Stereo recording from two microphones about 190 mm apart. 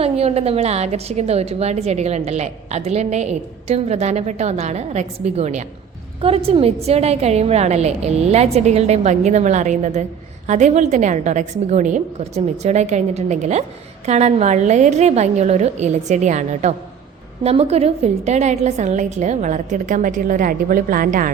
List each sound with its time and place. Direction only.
0.0 s a woman's voice: 35° right (ahead or behind)